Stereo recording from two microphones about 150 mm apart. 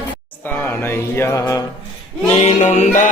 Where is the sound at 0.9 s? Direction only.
15° left (ahead or behind).